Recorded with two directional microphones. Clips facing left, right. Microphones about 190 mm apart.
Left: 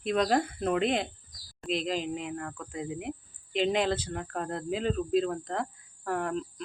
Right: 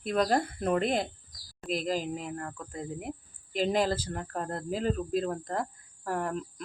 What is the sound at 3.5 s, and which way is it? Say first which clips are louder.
Speech: even; 40° right (ahead or behind).